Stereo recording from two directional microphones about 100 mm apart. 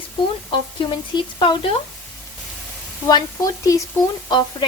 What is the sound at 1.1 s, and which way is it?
Speech, 50° left (ahead or behind).